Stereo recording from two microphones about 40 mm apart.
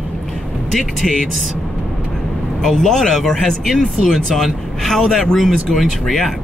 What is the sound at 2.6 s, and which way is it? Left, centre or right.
Speech, centre.